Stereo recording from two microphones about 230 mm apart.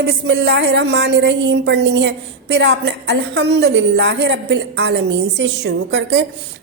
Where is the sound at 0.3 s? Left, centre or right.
Right.